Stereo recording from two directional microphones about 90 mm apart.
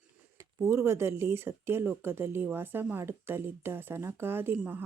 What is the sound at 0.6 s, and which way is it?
Speech, 30° right (ahead or behind).